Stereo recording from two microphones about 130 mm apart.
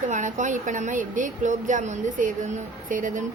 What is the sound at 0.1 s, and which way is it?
A woman's voice, 70° right (ahead or behind).